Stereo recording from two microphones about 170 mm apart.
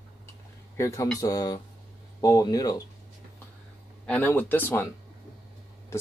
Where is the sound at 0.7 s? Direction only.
20° left (ahead or behind).